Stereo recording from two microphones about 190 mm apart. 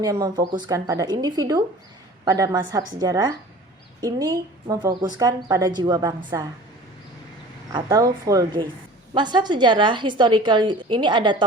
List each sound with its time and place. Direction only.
0.0 s a woman's voice: 20° right (ahead or behind)
7.7 s a woman's voice: 20° right (ahead or behind)